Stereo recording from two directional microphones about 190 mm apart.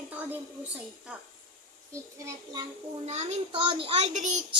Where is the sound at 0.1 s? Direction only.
10° right (ahead or behind).